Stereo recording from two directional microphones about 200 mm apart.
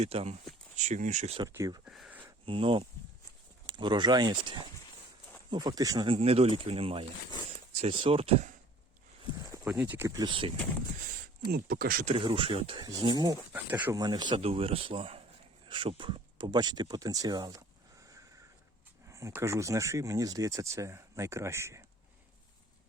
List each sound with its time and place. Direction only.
0.0 s speech: 30° right (ahead or behind)
1.4 s speech: 15° right (ahead or behind)
1.8 s a sound: 5° right (ahead or behind)
2.5 s speech: 25° right (ahead or behind)
9.6 s speech: 5° right (ahead or behind); by 10.5 s 25° right (ahead or behind)
11.4 s speech: 50° right (ahead or behind)
12.1 s speech: 25° right (ahead or behind)
13.5 s speech: 10° right (ahead or behind)
14.0 s speech: 20° right (ahead or behind)
19.0 s speech: 15° right (ahead or behind)